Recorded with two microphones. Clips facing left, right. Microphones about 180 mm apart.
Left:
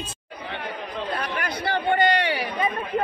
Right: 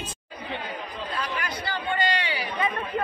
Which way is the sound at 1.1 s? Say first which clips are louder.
Left 2 dB; 60° left (ahead or behind).